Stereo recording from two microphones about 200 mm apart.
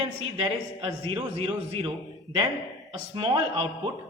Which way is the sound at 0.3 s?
30° right (ahead or behind).